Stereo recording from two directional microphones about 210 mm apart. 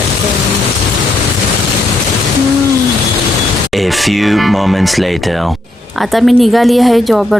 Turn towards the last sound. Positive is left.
turn(degrees=0)  # may be behind; listen again after turning